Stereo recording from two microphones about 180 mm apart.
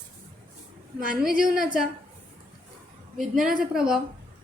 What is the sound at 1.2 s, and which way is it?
Speech, 5° right (ahead or behind).